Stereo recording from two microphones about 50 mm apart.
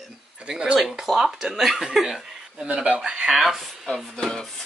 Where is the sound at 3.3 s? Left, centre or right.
Centre.